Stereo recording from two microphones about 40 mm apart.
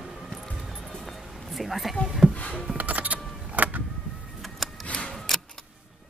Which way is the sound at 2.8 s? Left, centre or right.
Right.